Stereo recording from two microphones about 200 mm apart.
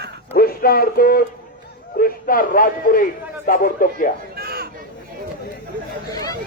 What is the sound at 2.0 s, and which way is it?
A man's voice, 45° left (ahead or behind).